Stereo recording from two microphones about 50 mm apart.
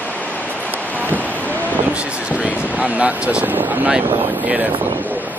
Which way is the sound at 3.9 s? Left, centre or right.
Right.